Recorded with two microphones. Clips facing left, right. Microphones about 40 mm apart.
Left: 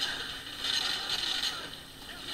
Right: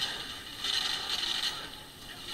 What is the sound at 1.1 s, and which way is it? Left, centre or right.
Mechanisms, centre.